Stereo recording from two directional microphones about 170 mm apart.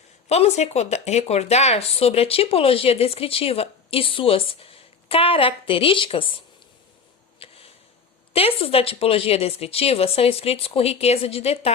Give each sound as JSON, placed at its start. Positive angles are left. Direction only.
{"t": 0.3, "sound": "speech", "side_deg": 40}
{"t": 7.3, "sound": "a sound", "side_deg": 35}
{"t": 8.3, "sound": "speech", "side_deg": 35}